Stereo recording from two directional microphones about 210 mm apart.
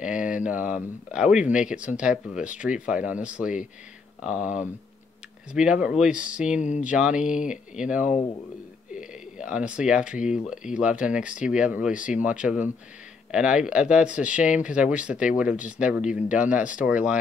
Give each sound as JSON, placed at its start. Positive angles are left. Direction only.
{"t": 0.0, "sound": "speech", "side_deg": -5}
{"t": 5.5, "sound": "speech", "side_deg": -5}
{"t": 6.6, "sound": "speech", "side_deg": 35}
{"t": 6.9, "sound": "speech", "side_deg": -5}